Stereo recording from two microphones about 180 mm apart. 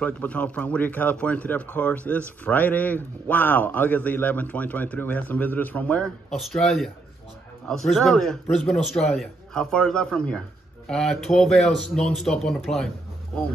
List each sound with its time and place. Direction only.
0.0 s a man's voice: 10° left (ahead or behind)